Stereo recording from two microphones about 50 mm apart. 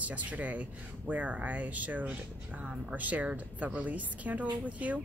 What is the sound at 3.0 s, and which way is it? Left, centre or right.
A woman's voice, right.